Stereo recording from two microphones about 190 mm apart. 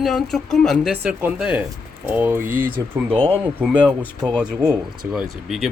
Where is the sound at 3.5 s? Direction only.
10° right (ahead or behind).